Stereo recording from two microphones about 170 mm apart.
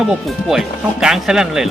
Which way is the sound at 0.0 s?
Centre (ahead or behind).